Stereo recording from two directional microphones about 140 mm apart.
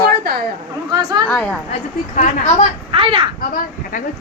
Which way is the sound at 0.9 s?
30° right (ahead or behind).